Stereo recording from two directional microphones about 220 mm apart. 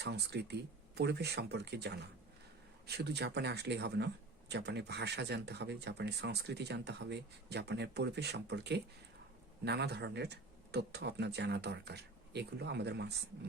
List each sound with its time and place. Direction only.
0.0 s speech: 50° right (ahead or behind)